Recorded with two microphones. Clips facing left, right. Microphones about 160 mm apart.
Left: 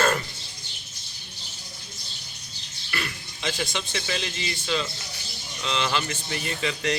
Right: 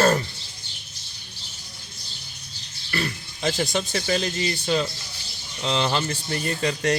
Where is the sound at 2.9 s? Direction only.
40° right (ahead or behind).